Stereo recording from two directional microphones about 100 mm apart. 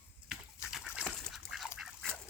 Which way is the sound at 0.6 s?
5° right (ahead or behind).